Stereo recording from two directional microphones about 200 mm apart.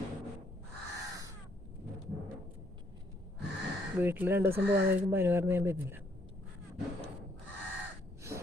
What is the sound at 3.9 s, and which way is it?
Speech, 10° right (ahead or behind).